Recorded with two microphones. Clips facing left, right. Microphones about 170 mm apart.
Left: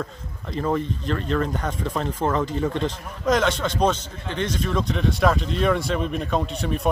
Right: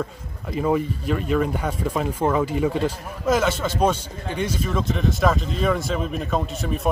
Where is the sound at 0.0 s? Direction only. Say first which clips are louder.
Right 2 dB; 10° right (ahead or behind).